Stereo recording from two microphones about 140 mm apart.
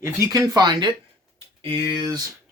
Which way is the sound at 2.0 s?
25° right (ahead or behind).